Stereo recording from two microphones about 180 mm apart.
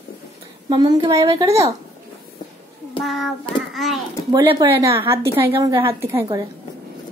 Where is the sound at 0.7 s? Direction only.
25° right (ahead or behind).